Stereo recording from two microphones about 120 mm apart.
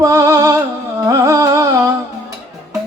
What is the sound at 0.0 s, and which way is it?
Music, 25° right (ahead or behind).